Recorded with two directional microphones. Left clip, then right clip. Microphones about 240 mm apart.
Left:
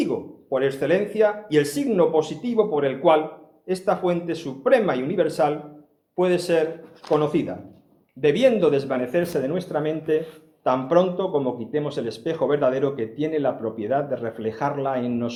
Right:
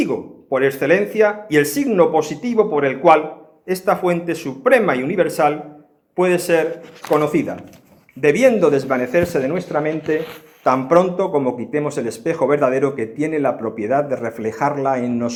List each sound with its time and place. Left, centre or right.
0.5 s a man's voice: right
8.9 s speech: right
10.6 s a man's voice: right